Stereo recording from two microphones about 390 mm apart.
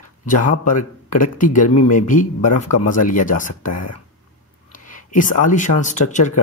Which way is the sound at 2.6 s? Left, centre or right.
Left.